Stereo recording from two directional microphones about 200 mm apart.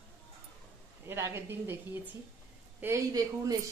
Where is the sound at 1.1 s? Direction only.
15° right (ahead or behind).